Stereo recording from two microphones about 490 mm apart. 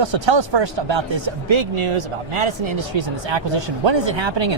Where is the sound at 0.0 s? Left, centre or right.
Right.